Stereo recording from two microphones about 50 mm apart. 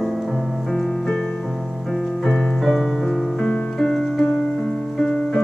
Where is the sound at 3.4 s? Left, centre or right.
Centre.